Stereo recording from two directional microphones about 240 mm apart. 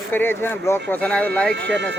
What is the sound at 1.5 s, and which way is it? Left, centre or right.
Speech, right.